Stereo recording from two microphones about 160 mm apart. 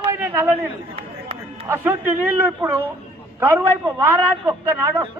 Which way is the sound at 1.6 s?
15° right (ahead or behind).